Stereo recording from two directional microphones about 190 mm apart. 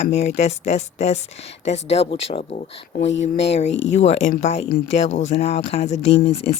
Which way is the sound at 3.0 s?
70° left (ahead or behind).